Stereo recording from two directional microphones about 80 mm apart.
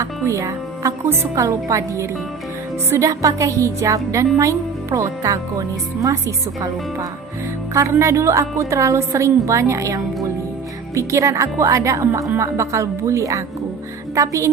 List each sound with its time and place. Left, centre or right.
0.0 s a woman's voice: right